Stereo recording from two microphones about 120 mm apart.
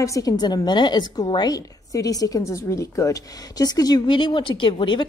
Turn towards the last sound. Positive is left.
turn(degrees=40)  # may be behind; listen again after turning